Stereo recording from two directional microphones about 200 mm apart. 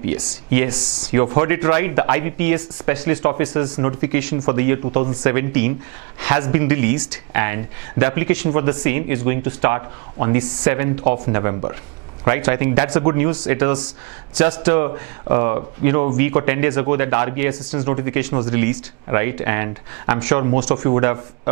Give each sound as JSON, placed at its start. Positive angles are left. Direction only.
{"t": 0.0, "sound": "speech", "side_deg": -10}